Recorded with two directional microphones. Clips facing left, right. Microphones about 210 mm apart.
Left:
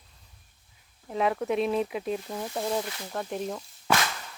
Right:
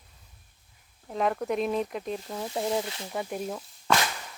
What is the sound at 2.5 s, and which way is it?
Speech, 15° right (ahead or behind).